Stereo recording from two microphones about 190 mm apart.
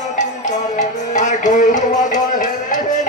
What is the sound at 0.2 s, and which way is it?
Music, 40° left (ahead or behind).